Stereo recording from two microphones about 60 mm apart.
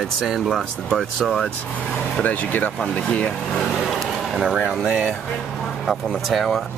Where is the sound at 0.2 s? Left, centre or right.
Centre.